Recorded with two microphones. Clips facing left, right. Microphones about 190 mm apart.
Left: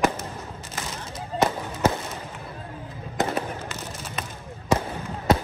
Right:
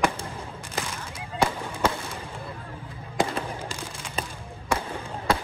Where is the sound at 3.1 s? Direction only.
10° right (ahead or behind).